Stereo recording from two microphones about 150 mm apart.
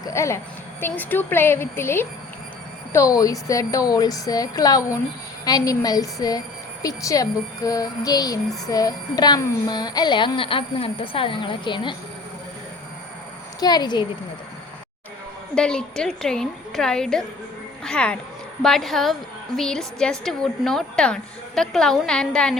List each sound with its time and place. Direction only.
0.0 s a woman's voice: 20° left (ahead or behind)
13.6 s speech: 25° left (ahead or behind)
15.5 s a woman's voice: 5° left (ahead or behind)